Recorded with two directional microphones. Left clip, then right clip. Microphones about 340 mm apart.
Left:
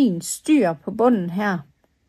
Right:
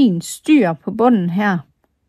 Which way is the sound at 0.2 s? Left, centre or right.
Right.